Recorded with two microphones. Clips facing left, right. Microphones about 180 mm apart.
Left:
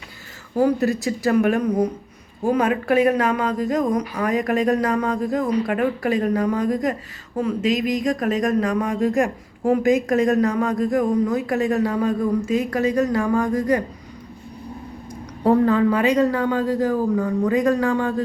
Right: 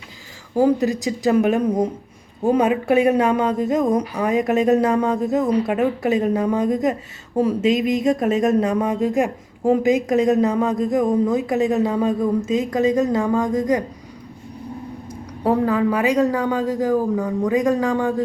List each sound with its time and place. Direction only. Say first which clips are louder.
0.5 s speech: right 2 dB; 15° right (ahead or behind)
2.4 s speech: right 2 dB; 25° right (ahead or behind)
15.4 s speech: left 2 dB; 5° right (ahead or behind)